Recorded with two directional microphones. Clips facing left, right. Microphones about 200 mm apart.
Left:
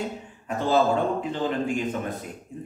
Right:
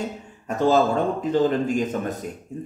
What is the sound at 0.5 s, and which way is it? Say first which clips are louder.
A man's voice: right 3 dB; 45° right (ahead or behind).